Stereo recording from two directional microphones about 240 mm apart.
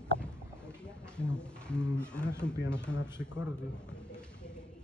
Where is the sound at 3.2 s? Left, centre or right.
Left.